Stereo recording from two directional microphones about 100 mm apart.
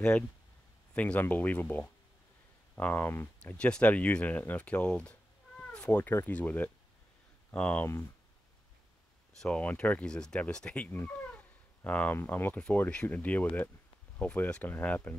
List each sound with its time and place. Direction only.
0.9 s speech: 15° left (ahead or behind)
3.5 s speech: 10° left (ahead or behind)
9.4 s speech: 10° left (ahead or behind)